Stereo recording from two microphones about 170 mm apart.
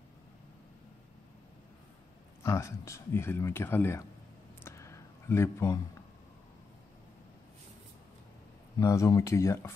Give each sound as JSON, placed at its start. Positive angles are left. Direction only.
{"t": 2.4, "sound": "speech", "side_deg": 15}
{"t": 4.6, "sound": "a sound", "side_deg": 15}
{"t": 8.7, "sound": "speech", "side_deg": 20}